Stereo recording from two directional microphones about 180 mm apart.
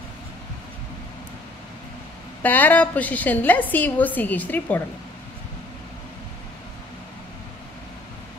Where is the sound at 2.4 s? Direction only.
10° left (ahead or behind).